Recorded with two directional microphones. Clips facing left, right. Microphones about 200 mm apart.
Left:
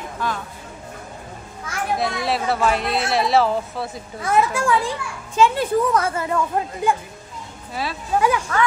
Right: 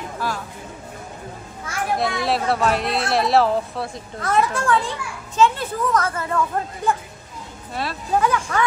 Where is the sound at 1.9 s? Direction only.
Centre (ahead or behind).